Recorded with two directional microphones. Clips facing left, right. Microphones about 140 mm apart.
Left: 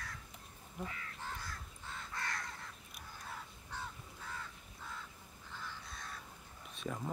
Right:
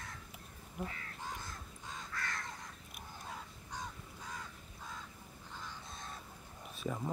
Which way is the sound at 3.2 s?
15° right (ahead or behind).